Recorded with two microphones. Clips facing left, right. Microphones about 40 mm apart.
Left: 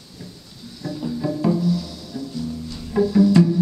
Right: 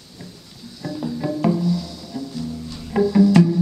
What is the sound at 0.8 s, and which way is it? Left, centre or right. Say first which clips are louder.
Music: even; centre.